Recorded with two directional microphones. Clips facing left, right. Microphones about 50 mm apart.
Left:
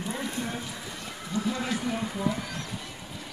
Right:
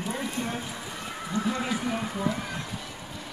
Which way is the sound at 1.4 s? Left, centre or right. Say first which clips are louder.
Right 1 dB; centre.